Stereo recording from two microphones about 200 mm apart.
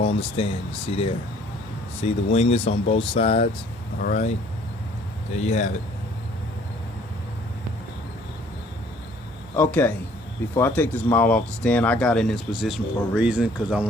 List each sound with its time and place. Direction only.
0.3 s speech: 30° left (ahead or behind)
4.0 s a man's voice: 40° left (ahead or behind)
5.3 s a man's voice: 35° left (ahead or behind)
9.6 s a man's voice: 10° left (ahead or behind)